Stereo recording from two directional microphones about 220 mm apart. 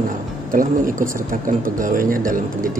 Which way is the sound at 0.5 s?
40° right (ahead or behind).